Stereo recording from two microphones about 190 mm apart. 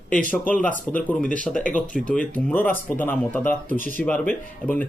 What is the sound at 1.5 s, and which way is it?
Speech, 40° left (ahead or behind).